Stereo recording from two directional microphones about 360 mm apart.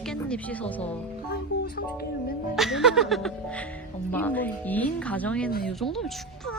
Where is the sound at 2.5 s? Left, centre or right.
Centre.